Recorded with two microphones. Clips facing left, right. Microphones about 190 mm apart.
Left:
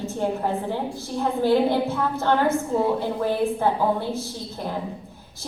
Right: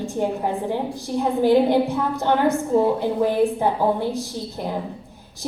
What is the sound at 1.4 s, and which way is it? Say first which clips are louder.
A woman's voice: right 3 dB; 15° right (ahead or behind).